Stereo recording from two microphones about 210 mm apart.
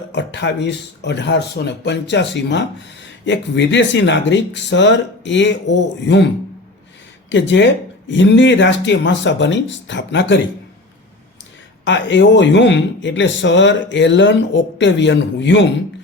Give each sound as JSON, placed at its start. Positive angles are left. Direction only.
{"t": 0.1, "sound": "speech", "side_deg": 55}
{"t": 7.3, "sound": "speech", "side_deg": 60}
{"t": 11.9, "sound": "speech", "side_deg": 60}